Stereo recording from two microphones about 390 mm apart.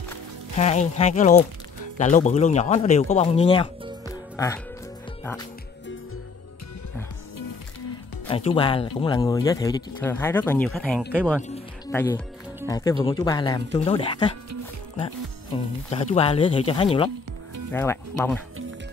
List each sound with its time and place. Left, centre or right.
0.6 s speech: centre
4.1 s music: centre
5.2 s speech: centre
8.3 s speech: centre
15.5 s speech: centre